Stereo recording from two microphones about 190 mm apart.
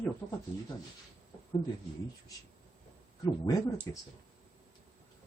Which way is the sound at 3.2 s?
20° left (ahead or behind).